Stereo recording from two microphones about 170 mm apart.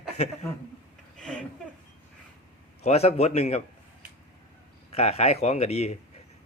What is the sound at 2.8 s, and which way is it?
Speech, 40° left (ahead or behind).